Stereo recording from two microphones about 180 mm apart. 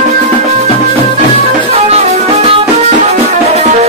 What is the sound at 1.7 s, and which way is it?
Music, 35° right (ahead or behind).